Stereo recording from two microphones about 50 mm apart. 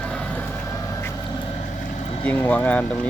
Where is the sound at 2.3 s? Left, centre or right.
Left.